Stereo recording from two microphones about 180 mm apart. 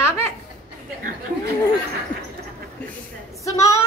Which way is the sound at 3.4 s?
15° left (ahead or behind).